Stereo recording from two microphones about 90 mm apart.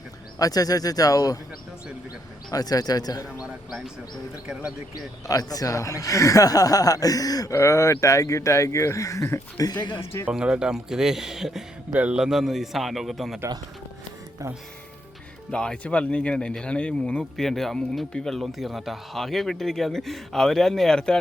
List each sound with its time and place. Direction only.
0.3 s speech: 45° left (ahead or behind)
2.5 s speech: 45° left (ahead or behind)
3.4 s speech: centre (ahead or behind)
4.9 s speech: 45° left (ahead or behind)
10.2 s speech: 10° right (ahead or behind)
15.5 s speech: 10° left (ahead or behind)